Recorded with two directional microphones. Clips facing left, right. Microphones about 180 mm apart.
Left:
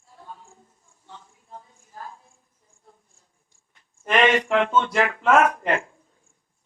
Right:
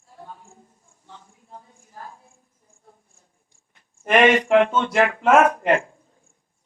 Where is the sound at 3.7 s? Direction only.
55° right (ahead or behind).